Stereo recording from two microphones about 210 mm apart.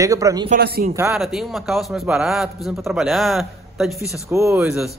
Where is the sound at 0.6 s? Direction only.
50° right (ahead or behind).